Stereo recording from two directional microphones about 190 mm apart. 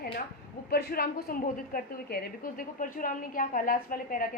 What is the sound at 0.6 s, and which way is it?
A woman's voice, 55° left (ahead or behind).